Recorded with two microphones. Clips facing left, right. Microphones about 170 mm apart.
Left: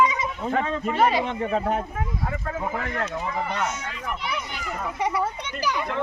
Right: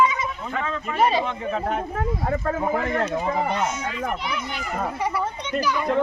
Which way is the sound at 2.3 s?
45° right (ahead or behind).